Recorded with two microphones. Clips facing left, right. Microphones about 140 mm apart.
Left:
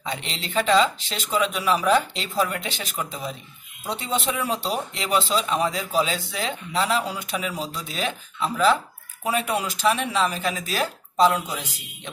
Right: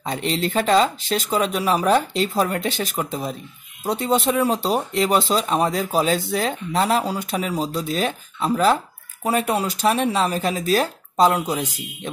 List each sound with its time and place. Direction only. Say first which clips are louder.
0.0 s speech: right 8 dB; 45° right (ahead or behind)